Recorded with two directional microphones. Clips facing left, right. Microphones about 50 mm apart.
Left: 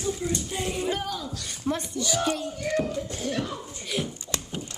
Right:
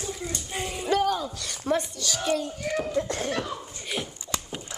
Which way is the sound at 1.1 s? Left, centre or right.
Centre.